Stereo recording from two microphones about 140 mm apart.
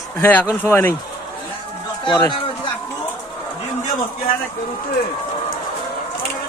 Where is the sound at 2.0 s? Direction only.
35° left (ahead or behind).